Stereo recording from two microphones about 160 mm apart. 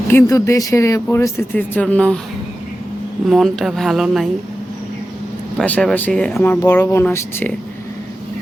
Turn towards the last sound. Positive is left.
turn(degrees=10)  # may be behind; listen again after turning